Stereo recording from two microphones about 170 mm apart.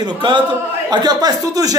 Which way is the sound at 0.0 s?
30° right (ahead or behind).